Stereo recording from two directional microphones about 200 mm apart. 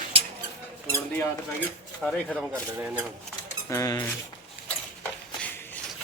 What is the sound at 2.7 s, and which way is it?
Speech, 10° right (ahead or behind).